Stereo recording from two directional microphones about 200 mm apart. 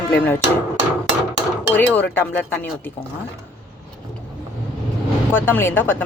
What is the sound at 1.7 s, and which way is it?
Speech, 10° left (ahead or behind).